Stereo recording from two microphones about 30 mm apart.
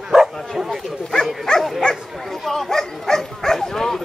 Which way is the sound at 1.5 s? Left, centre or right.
Left.